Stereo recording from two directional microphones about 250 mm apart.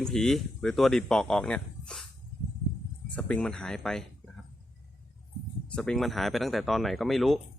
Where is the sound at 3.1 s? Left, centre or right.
Centre.